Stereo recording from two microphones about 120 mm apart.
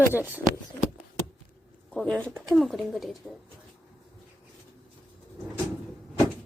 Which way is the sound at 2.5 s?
Centre (ahead or behind).